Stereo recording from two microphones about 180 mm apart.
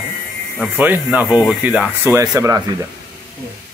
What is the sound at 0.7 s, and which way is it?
Speech, 10° right (ahead or behind).